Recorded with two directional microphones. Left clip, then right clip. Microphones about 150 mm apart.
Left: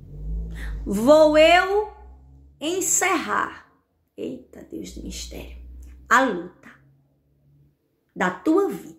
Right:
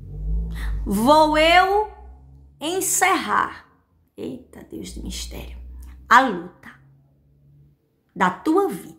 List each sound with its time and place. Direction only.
0.5 s a woman's voice: 20° right (ahead or behind)
8.1 s a woman's voice: 20° right (ahead or behind)